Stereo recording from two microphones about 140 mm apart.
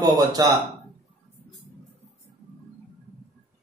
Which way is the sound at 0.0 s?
25° right (ahead or behind).